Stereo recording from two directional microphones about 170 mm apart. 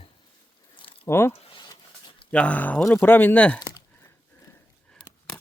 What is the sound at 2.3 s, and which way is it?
Speech, 5° left (ahead or behind).